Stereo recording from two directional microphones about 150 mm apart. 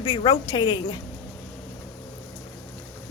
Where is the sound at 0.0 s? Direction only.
30° left (ahead or behind).